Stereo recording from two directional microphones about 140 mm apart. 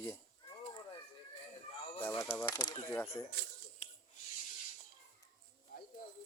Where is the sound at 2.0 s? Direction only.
15° left (ahead or behind).